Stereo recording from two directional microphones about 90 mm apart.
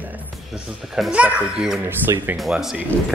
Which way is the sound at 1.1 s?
15° right (ahead or behind).